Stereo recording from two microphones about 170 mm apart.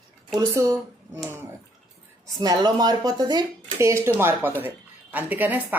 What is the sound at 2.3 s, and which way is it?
Speech, 20° right (ahead or behind).